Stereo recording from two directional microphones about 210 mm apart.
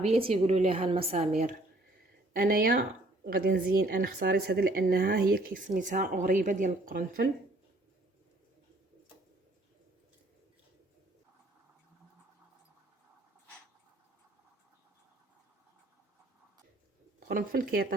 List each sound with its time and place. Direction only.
0.0 s a woman's voice: 25° right (ahead or behind); by 7.3 s 45° right (ahead or behind)
17.2 s speech: 45° right (ahead or behind)